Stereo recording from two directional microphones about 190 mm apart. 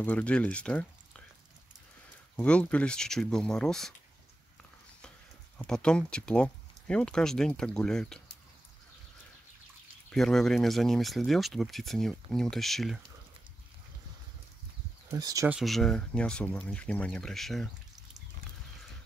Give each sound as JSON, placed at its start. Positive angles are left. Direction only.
{"t": 0.0, "sound": "speech", "side_deg": 5}
{"t": 2.3, "sound": "speech", "side_deg": 5}
{"t": 5.6, "sound": "speech", "side_deg": 5}
{"t": 10.0, "sound": "speech", "side_deg": 0}
{"t": 15.0, "sound": "speech", "side_deg": -20}
{"t": 15.4, "sound": "speech", "side_deg": -5}